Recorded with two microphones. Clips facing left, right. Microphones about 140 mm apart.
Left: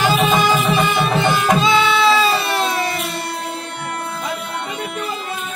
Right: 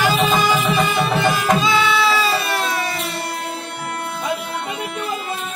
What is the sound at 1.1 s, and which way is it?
Music, 25° left (ahead or behind).